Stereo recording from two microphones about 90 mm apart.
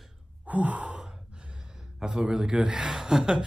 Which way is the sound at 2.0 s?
5° right (ahead or behind).